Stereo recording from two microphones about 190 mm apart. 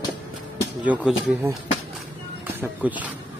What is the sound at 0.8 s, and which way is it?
Speech, 10° right (ahead or behind).